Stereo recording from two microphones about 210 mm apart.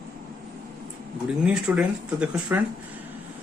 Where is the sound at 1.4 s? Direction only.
5° right (ahead or behind).